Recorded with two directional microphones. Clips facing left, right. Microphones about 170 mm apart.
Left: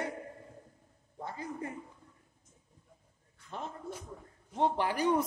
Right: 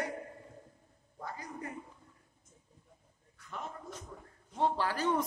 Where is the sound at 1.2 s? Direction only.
25° left (ahead or behind).